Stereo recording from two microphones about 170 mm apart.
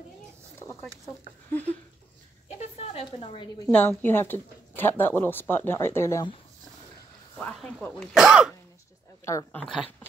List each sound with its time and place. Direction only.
1.0 s speech: 10° left (ahead or behind)
2.6 s a sound: 40° left (ahead or behind)
3.7 s speech: 10° left (ahead or behind)
7.3 s speech: 5° left (ahead or behind)
9.2 s speech: 15° left (ahead or behind)
9.6 s speech: 5° left (ahead or behind)